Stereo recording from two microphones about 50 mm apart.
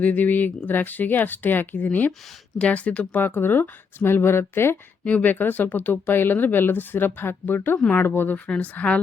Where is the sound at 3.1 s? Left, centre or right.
Left.